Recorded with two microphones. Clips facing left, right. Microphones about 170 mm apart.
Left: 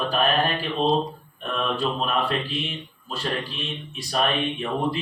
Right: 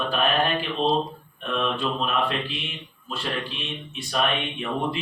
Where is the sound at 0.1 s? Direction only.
40° left (ahead or behind).